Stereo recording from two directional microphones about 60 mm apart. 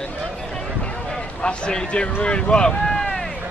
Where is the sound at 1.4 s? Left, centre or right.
Centre.